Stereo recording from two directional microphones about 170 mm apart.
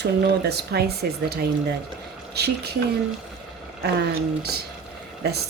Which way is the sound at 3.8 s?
70° right (ahead or behind).